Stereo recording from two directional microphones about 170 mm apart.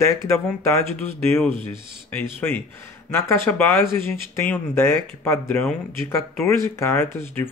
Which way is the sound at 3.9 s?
15° left (ahead or behind).